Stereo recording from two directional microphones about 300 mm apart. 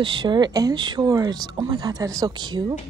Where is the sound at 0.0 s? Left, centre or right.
Centre.